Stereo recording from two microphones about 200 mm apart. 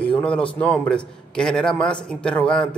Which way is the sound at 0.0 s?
5° left (ahead or behind).